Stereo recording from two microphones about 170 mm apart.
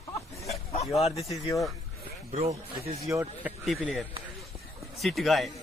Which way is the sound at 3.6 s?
Centre (ahead or behind).